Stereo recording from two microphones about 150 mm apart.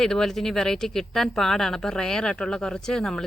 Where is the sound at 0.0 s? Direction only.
5° left (ahead or behind).